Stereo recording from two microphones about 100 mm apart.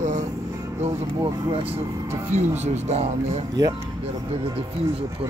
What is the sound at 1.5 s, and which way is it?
Speech, 75° right (ahead or behind).